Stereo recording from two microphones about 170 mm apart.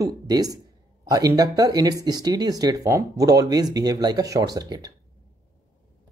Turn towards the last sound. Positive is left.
turn(degrees=-25)  # may be behind; listen again after turning